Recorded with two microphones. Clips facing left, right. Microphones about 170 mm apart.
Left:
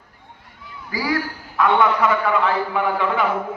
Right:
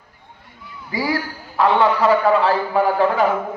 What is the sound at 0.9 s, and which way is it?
A man's voice, 25° right (ahead or behind).